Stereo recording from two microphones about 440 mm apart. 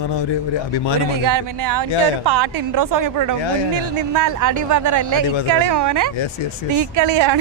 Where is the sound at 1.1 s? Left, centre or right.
Right.